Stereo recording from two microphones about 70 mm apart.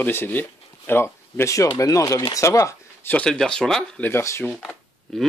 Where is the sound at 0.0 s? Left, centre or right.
Left.